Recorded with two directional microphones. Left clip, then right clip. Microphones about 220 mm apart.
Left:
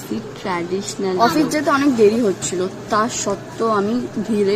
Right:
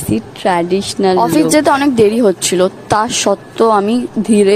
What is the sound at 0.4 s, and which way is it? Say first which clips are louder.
A woman's voice: right 10 dB; 40° right (ahead or behind).